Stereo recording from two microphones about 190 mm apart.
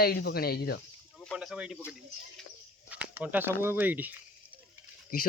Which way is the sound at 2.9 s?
10° right (ahead or behind).